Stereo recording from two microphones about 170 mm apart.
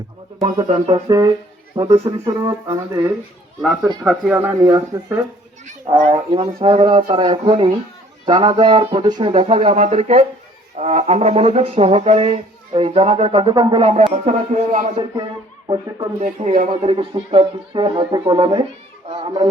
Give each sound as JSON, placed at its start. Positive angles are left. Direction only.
{"t": 0.4, "sound": "speech", "side_deg": -35}
{"t": 1.0, "sound": "speech", "side_deg": -20}
{"t": 4.0, "sound": "speech", "side_deg": -5}
{"t": 6.1, "sound": "speech", "side_deg": -30}
{"t": 15.6, "sound": "speech", "side_deg": -25}
{"t": 16.2, "sound": "speech", "side_deg": -45}